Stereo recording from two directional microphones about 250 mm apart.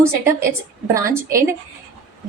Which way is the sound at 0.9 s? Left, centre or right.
Centre.